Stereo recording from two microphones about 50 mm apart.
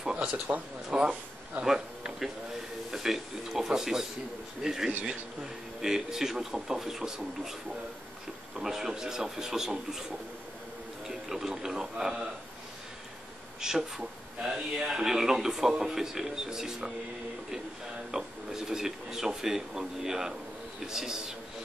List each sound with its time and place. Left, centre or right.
0.5 s speech: right
1.0 s a man's voice: centre
1.7 s speech: centre
8.5 s speech: centre
11.1 s speech: centre
13.6 s speech: centre
18.1 s speech: centre